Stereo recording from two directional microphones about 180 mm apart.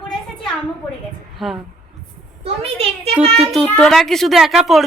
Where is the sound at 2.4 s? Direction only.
35° right (ahead or behind).